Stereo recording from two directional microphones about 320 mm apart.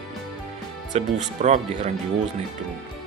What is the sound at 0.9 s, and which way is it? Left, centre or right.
Speech, centre.